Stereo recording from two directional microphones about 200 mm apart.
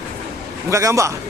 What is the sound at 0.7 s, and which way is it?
Speech, 15° right (ahead or behind).